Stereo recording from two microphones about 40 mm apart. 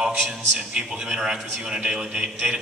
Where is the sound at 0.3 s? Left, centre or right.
Centre.